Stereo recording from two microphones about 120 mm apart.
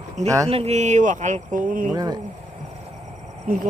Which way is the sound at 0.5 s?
60° right (ahead or behind).